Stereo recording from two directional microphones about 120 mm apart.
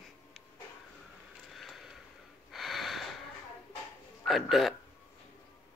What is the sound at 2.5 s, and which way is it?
Gasp, centre (ahead or behind).